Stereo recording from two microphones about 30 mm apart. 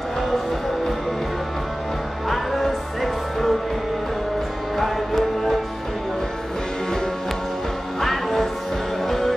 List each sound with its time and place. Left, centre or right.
2.2 s music: centre
8.0 s music: centre